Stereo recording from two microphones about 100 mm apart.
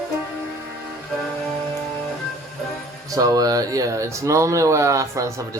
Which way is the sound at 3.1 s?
35° right (ahead or behind).